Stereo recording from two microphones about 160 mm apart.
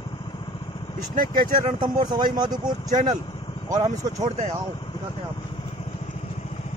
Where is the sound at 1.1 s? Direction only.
60° right (ahead or behind).